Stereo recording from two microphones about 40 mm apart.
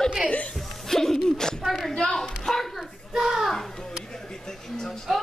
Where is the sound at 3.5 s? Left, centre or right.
Centre.